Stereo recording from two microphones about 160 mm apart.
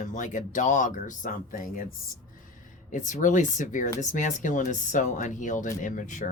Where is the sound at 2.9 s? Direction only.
55° left (ahead or behind).